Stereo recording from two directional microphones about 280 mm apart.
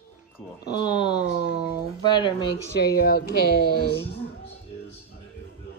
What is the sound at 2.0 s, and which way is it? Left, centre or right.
Speech, centre.